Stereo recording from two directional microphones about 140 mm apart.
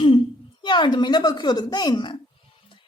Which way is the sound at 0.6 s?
35° left (ahead or behind).